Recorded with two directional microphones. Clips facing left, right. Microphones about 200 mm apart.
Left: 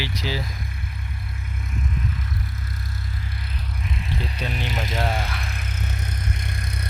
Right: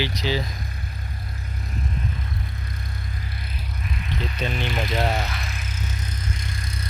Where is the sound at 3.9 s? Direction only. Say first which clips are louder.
Even; 30° left (ahead or behind).